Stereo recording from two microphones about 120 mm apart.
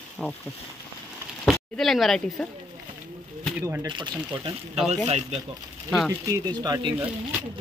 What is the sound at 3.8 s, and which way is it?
Speech, 40° right (ahead or behind).